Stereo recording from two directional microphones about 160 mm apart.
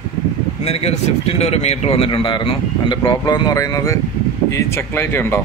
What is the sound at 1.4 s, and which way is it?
A man's voice, 40° left (ahead or behind).